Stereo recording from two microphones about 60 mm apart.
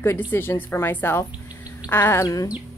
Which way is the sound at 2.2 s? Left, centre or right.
Left.